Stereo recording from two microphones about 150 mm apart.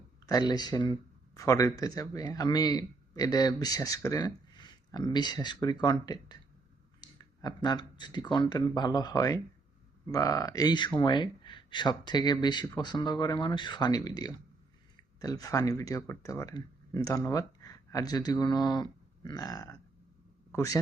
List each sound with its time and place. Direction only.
0.3 s a man's voice: 25° left (ahead or behind)